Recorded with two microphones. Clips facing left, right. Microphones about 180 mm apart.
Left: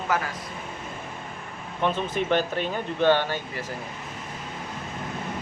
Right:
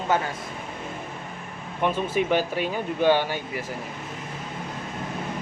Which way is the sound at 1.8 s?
10° right (ahead or behind).